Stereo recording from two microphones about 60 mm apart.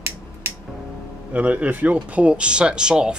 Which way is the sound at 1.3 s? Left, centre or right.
Right.